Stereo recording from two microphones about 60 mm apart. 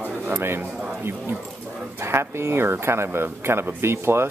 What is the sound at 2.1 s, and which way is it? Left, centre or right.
Speech, right.